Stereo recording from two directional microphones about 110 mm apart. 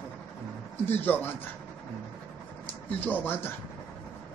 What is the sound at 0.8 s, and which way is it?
Speech, 15° left (ahead or behind).